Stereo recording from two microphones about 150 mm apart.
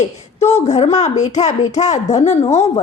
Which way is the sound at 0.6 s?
50° left (ahead or behind).